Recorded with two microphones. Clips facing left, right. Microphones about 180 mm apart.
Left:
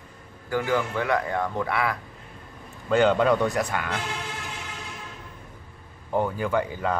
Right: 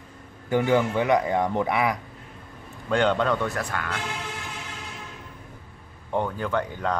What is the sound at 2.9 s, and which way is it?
Speech, 5° left (ahead or behind).